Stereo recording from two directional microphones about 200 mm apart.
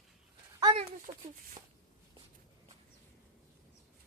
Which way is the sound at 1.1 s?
30° right (ahead or behind).